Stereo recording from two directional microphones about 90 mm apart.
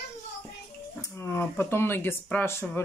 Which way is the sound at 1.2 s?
25° left (ahead or behind).